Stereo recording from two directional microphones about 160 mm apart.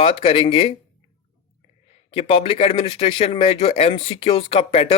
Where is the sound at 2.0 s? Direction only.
35° left (ahead or behind).